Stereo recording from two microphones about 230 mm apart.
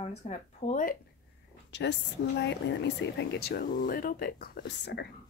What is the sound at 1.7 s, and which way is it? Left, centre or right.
Speech, left.